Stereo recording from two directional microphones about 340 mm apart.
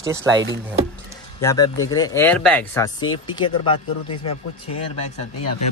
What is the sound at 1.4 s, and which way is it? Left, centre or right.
Speech, centre.